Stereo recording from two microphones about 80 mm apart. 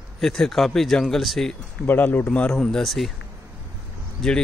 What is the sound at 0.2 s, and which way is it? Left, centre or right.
Speech, centre.